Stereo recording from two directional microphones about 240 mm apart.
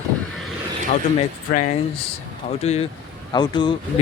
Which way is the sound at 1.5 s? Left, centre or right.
Left.